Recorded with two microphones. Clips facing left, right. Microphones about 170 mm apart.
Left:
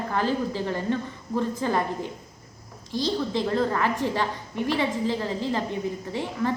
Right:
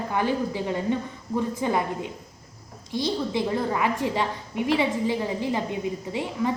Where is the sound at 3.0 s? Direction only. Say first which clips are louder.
Even; 15° right (ahead or behind).